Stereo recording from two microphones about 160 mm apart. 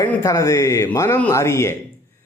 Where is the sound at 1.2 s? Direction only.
15° left (ahead or behind).